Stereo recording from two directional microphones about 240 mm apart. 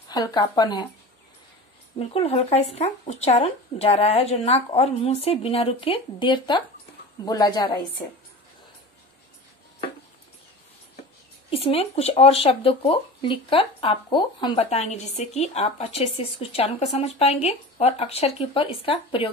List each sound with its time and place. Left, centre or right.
0.1 s speech: centre
2.0 s speech: left
11.5 s speech: left